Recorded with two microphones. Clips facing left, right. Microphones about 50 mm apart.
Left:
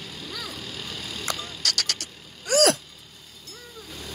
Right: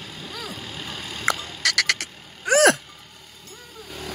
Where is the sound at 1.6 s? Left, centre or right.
Right.